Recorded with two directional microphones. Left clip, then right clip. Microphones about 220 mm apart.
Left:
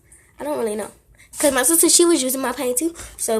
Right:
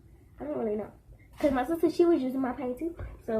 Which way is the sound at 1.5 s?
40° left (ahead or behind).